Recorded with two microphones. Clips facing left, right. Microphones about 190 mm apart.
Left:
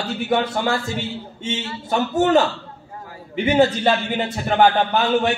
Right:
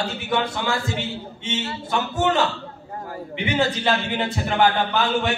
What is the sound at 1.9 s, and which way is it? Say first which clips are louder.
A man's voice: left 5 dB; 40° left (ahead or behind).